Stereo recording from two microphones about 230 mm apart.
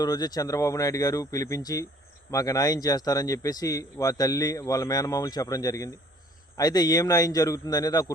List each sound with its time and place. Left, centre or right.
0.0 s speech: centre